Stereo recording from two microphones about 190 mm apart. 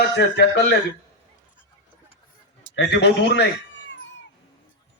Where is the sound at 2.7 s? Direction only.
65° left (ahead or behind).